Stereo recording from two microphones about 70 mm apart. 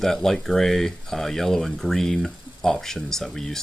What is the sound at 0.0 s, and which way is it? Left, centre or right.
Speech, centre.